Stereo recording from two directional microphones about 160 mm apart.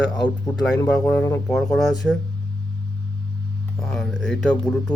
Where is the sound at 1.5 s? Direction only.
Centre (ahead or behind).